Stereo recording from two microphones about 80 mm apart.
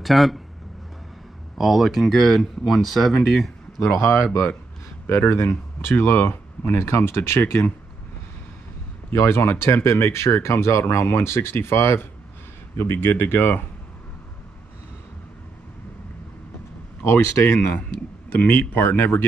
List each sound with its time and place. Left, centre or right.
0.0 s speech: centre
1.6 s speech: centre
4.0 s speech: left
9.1 s speech: left
17.6 s speech: centre